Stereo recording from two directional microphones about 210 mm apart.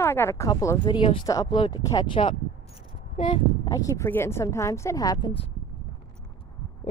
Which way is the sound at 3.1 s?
35° left (ahead or behind).